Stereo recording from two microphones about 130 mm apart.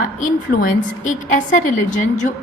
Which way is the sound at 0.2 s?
85° left.